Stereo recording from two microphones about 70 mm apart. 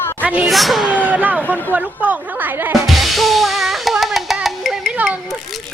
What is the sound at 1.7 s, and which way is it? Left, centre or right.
Speech, right.